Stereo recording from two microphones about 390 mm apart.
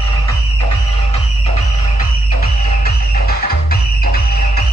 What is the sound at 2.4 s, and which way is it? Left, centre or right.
Music, left.